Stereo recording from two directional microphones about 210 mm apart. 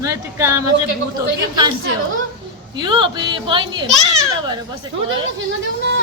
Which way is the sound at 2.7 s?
20° right (ahead or behind).